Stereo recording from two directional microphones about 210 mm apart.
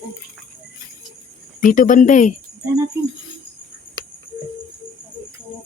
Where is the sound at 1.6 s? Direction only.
40° left (ahead or behind).